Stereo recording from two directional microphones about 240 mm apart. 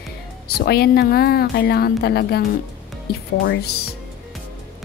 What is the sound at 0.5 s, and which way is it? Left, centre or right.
Speech, left.